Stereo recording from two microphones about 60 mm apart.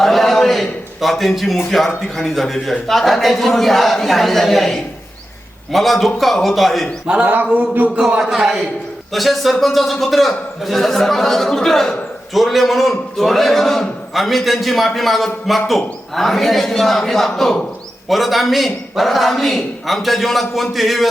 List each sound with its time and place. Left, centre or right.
0.0 s a man's voice: centre
7.1 s a sound: centre
7.9 s a man's voice: centre